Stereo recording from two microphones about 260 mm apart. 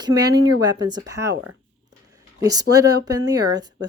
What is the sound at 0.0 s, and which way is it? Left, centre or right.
A woman's voice, centre.